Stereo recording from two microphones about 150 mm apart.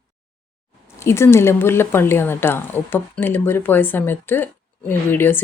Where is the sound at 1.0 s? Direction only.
15° left (ahead or behind).